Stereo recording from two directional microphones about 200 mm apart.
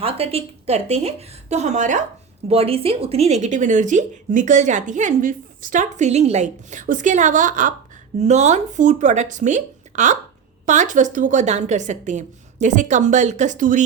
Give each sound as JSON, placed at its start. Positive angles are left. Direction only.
{"t": 0.0, "sound": "speech", "side_deg": -30}